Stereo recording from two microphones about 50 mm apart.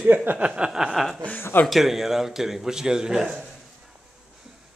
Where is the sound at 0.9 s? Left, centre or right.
Centre.